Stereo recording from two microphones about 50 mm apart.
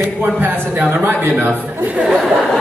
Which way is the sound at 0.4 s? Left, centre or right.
Right.